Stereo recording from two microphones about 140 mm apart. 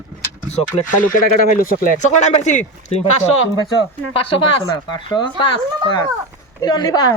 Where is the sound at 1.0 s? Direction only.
80° left.